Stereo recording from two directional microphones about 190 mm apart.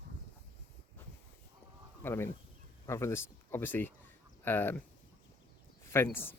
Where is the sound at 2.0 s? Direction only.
10° left (ahead or behind).